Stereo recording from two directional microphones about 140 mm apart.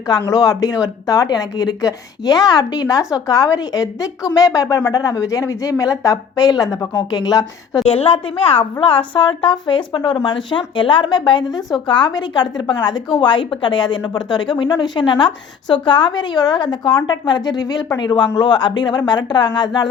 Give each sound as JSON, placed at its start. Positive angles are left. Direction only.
{"t": 0.1, "sound": "speech", "side_deg": 25}
{"t": 7.9, "sound": "a woman's voice", "side_deg": 45}